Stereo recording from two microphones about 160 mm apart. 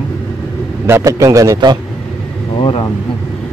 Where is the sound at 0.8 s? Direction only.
15° right (ahead or behind).